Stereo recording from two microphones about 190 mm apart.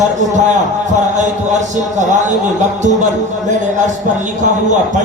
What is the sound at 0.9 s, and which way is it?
A man's voice, 40° right (ahead or behind).